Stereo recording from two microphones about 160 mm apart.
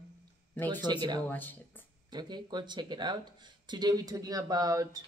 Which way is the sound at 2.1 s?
25° right (ahead or behind).